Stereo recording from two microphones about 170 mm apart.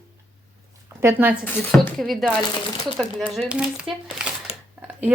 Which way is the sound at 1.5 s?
5° left (ahead or behind).